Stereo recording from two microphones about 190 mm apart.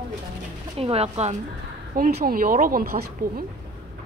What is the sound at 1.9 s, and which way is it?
A woman's voice, 50° right (ahead or behind).